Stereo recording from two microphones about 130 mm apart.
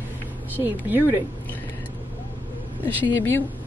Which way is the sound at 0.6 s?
15° right (ahead or behind).